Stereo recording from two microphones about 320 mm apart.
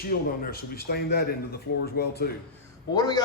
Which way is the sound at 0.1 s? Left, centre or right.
Left.